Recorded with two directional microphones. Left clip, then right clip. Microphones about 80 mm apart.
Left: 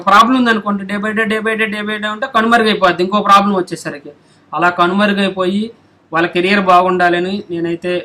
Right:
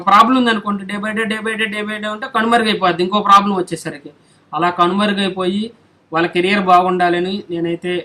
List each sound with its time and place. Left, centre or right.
0.1 s a man's voice: left